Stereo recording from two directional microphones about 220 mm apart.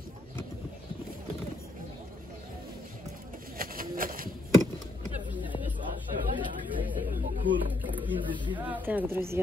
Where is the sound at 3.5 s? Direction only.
40° right (ahead or behind).